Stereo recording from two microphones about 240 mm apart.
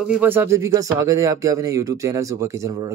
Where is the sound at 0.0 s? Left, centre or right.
Centre.